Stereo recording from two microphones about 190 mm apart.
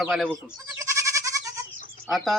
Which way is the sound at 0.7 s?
15° right (ahead or behind).